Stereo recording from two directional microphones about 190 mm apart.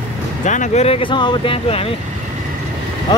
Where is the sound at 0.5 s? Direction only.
40° left (ahead or behind).